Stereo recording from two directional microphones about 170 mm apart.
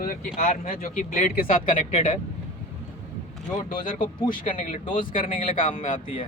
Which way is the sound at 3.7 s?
55° left (ahead or behind).